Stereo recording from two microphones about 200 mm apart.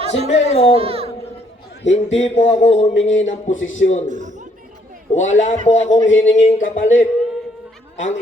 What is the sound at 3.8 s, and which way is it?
Speech, 35° left (ahead or behind).